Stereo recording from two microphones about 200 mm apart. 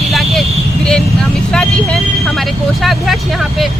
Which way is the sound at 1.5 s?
5° left (ahead or behind).